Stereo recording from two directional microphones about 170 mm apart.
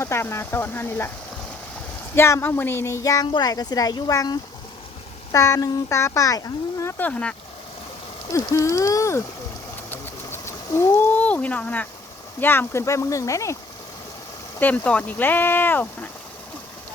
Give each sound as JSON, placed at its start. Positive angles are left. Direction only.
{"t": 0.0, "sound": "speech", "side_deg": 15}
{"t": 2.1, "sound": "speech", "side_deg": 15}
{"t": 8.3, "sound": "speech", "side_deg": 20}
{"t": 9.9, "sound": "a sound", "side_deg": 15}
{"t": 12.4, "sound": "speech", "side_deg": 10}
{"t": 14.6, "sound": "speech", "side_deg": 10}